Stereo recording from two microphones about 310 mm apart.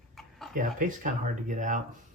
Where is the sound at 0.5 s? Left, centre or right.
Right.